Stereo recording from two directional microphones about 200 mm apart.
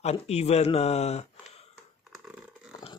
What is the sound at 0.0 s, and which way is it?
Speech, 30° left (ahead or behind).